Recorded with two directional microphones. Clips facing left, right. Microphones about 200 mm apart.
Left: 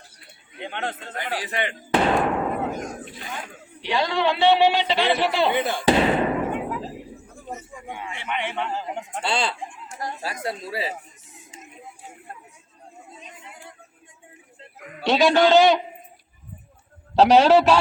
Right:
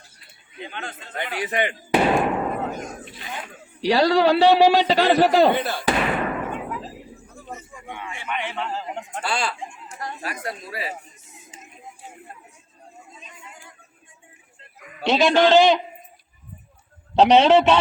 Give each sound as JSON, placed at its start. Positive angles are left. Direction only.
{"t": 0.6, "sound": "a man's voice", "side_deg": 65}
{"t": 1.5, "sound": "speech", "side_deg": -15}
{"t": 3.8, "sound": "a man's voice", "side_deg": -40}
{"t": 5.5, "sound": "speech", "side_deg": 15}
{"t": 7.4, "sound": "a sound", "side_deg": 10}
{"t": 8.0, "sound": "a man's voice", "side_deg": 20}
{"t": 9.2, "sound": "speech", "side_deg": 25}
{"t": 15.0, "sound": "a man's voice", "side_deg": 0}
{"t": 17.2, "sound": "a man's voice", "side_deg": 5}